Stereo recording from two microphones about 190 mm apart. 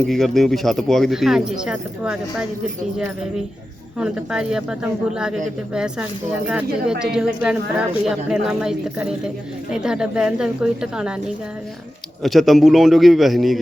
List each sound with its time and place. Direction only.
0.0 s speech: centre (ahead or behind)
3.9 s speech: 5° right (ahead or behind)
12.2 s speech: centre (ahead or behind)